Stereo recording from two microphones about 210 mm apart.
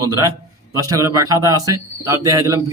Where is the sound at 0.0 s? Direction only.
15° right (ahead or behind).